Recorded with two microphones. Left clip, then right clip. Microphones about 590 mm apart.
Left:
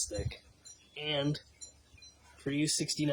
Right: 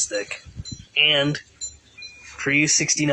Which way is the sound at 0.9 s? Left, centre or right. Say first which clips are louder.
Right 16 dB; left.